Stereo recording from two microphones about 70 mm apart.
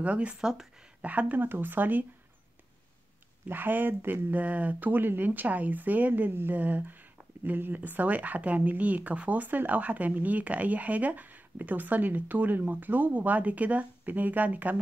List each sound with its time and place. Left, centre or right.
0.0 s speech: centre
1.0 s speech: right
3.4 s speech: right